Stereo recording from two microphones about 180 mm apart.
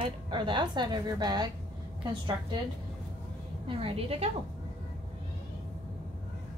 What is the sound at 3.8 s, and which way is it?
Speech, 30° right (ahead or behind).